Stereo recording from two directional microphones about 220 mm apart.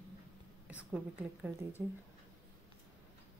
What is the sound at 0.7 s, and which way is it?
Speech, 5° right (ahead or behind).